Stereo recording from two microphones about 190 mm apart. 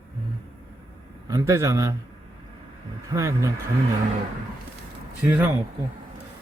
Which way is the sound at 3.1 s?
15° right (ahead or behind).